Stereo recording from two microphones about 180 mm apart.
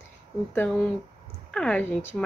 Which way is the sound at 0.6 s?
10° left (ahead or behind).